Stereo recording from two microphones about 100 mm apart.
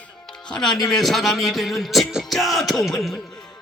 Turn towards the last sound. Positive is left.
turn(degrees=5)  # may be behind; listen again after turning